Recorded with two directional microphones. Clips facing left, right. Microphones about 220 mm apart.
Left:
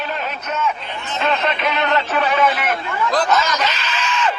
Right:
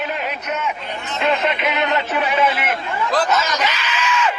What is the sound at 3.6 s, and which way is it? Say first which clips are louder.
Screaming: even; 15° right (ahead or behind).